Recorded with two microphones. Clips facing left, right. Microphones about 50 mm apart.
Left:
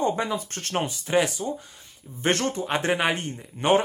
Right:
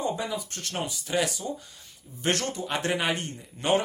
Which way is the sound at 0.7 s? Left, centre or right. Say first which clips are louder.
Left 6 dB; left.